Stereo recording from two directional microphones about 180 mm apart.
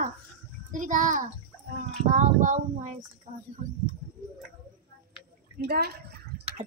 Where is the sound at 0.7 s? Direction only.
45° right (ahead or behind).